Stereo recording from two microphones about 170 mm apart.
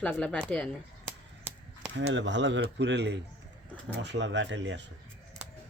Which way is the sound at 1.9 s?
90° right.